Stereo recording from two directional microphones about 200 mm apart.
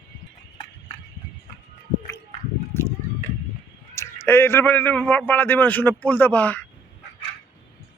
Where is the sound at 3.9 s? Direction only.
10° left (ahead or behind).